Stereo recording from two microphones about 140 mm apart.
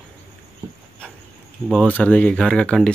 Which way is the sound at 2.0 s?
10° left (ahead or behind).